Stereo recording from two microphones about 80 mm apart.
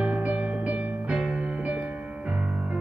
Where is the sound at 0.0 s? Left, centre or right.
Centre.